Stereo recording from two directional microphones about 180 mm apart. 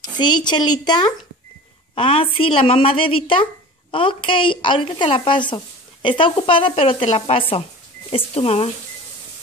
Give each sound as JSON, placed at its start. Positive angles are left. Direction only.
{"t": 0.2, "sound": "speech", "side_deg": 25}
{"t": 2.0, "sound": "speech", "side_deg": 30}